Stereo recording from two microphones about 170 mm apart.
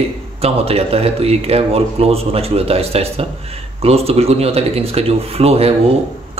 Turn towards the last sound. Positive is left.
turn(degrees=-35)  # may be behind; listen again after turning